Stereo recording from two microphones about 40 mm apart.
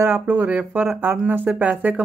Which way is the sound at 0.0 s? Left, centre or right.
Right.